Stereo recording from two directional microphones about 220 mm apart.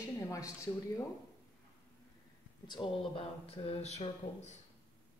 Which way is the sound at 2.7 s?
25° left (ahead or behind).